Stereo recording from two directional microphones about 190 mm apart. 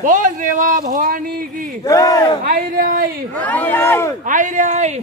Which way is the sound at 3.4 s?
10° left (ahead or behind).